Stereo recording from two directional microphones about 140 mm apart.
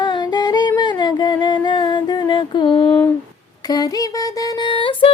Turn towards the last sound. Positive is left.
turn(degrees=35)  # may be behind; listen again after turning